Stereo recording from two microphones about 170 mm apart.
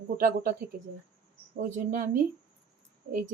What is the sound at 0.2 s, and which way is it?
Speech, 55° right (ahead or behind).